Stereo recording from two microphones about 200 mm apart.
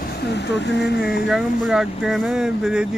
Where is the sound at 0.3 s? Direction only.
60° left (ahead or behind).